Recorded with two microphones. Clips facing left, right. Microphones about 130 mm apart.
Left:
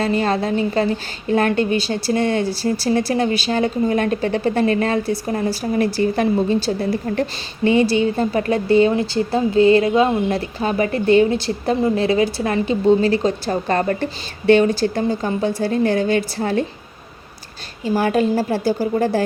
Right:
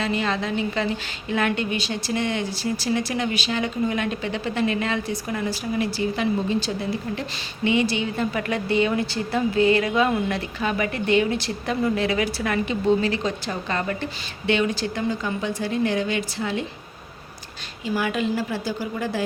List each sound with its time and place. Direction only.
0.0 s a woman's voice: 40° left (ahead or behind)
17.8 s a woman's voice: 40° left (ahead or behind)